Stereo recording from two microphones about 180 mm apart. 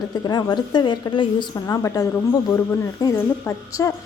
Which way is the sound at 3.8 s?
15° left (ahead or behind).